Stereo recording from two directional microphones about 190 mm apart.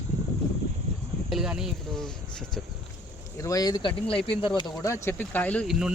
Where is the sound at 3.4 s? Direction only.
15° left (ahead or behind).